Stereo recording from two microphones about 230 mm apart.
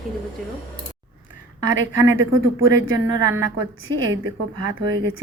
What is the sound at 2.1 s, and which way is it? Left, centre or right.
Speech, right.